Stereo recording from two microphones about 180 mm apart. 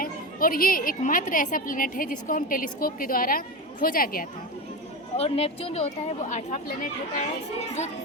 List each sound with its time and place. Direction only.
0.0 s a woman's voice: 50° left (ahead or behind)
5.1 s speech: 35° left (ahead or behind)